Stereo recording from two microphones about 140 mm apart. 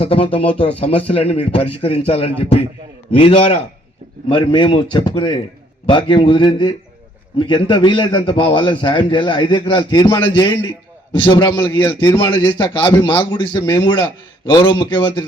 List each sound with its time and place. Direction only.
0.0 s a man's voice: 40° left (ahead or behind)